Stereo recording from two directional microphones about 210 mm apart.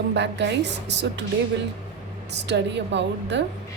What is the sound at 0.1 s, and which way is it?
Speech, 55° right (ahead or behind).